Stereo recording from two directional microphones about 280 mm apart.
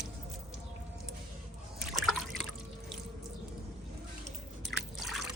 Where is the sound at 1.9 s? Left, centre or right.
Centre.